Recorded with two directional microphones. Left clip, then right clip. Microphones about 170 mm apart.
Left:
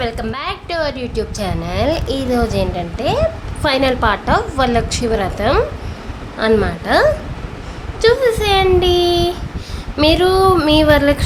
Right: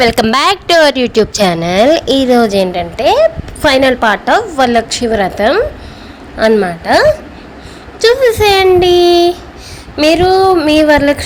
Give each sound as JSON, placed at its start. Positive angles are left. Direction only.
{"t": 0.0, "sound": "a woman's voice", "side_deg": -50}
{"t": 8.0, "sound": "a child's voice", "side_deg": -35}